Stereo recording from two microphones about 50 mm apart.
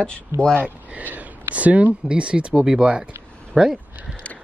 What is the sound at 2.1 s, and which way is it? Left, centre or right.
A woman's voice, right.